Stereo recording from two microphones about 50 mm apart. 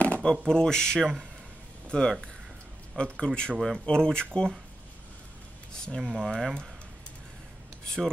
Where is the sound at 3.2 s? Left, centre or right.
Centre.